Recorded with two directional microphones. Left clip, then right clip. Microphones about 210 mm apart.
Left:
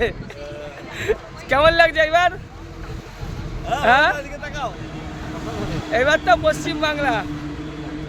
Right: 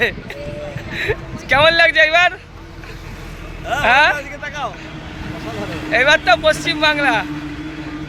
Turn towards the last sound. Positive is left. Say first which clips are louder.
# right 5 dB
turn(degrees=0)  # may be behind; listen again after turning